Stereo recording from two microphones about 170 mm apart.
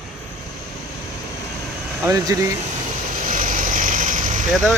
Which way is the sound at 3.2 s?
50° right (ahead or behind).